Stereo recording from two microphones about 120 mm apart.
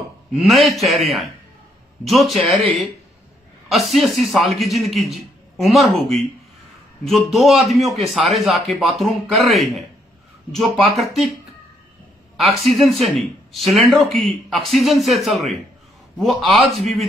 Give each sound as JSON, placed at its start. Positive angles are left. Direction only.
{"t": 0.3, "sound": "speech", "side_deg": 0}
{"t": 12.4, "sound": "speech", "side_deg": 0}